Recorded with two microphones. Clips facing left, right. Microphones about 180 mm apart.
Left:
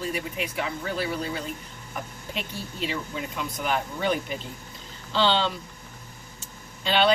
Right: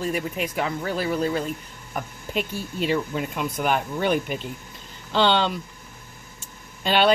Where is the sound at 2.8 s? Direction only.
55° right (ahead or behind).